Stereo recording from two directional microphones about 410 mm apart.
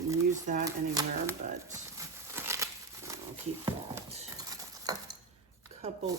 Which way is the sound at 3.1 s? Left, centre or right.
Centre.